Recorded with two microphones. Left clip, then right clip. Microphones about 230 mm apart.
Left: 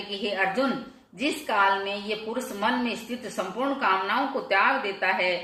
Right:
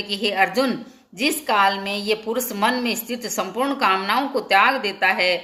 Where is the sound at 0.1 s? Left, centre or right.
Right.